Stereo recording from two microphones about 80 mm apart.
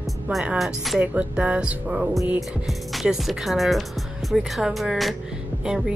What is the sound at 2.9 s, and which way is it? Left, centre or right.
Speech, centre.